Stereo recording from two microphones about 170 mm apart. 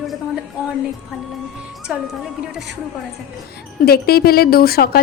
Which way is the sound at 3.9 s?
65° left (ahead or behind).